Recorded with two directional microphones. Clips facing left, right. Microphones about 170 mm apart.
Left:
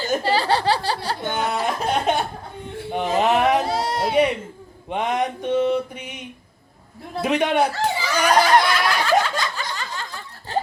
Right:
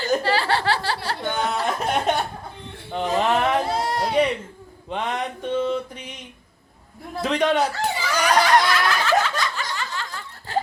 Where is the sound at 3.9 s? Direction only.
25° left (ahead or behind).